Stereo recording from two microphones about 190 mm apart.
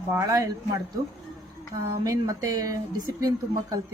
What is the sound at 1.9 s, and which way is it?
Speech, 20° right (ahead or behind).